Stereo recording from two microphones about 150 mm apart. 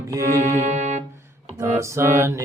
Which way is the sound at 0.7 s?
50° right (ahead or behind).